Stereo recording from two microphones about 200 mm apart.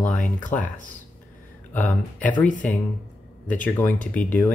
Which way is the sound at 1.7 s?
10° left (ahead or behind).